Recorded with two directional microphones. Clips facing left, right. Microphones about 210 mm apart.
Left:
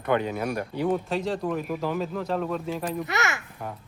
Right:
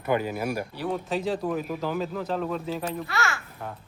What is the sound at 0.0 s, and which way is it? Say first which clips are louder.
Speech: left 1 dB; 5° right (ahead or behind).